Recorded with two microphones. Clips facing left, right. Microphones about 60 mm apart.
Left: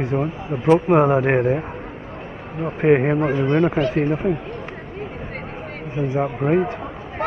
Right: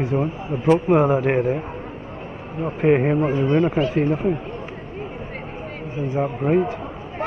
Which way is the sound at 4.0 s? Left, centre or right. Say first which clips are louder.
Even; left.